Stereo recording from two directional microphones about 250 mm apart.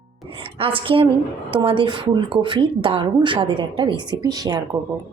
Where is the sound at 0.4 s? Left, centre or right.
Right.